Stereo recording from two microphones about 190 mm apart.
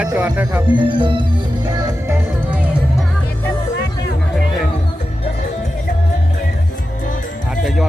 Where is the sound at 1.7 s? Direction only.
15° right (ahead or behind).